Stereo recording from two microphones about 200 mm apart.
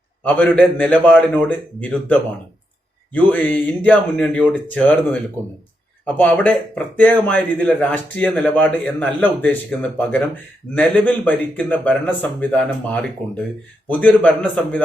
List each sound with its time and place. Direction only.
0.2 s speech: 10° left (ahead or behind)
6.1 s speech: 10° left (ahead or behind)